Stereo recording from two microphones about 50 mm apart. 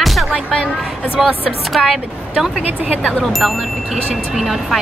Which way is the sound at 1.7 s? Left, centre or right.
Centre.